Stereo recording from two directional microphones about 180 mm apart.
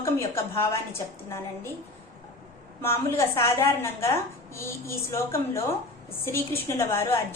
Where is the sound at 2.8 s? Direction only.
15° left (ahead or behind).